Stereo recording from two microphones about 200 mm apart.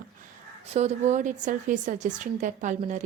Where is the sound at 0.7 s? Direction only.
35° right (ahead or behind).